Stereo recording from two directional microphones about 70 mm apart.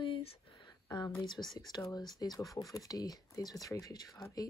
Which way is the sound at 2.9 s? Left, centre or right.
Left.